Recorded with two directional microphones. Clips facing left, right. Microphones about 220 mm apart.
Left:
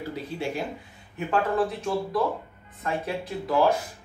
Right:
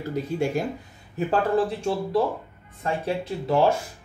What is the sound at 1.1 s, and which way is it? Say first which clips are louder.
Speech: right 3 dB; 30° right (ahead or behind).